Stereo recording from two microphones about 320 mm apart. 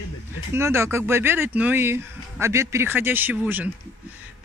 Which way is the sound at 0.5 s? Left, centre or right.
Centre.